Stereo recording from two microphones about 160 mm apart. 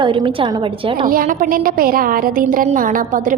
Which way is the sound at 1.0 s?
60° right (ahead or behind).